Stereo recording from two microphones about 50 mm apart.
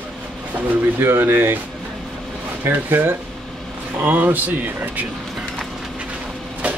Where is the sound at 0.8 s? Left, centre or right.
Right.